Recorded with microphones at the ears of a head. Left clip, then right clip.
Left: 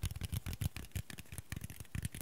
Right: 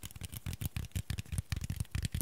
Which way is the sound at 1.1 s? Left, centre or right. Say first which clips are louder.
Right 4 dB; right.